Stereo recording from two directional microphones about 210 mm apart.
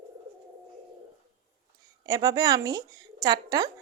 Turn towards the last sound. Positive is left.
turn(degrees=-15)  # may be behind; listen again after turning